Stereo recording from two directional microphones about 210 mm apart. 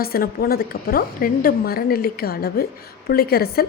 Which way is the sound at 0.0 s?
45° left (ahead or behind).